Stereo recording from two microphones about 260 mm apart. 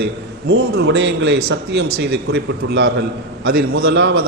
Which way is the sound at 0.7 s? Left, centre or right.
Right.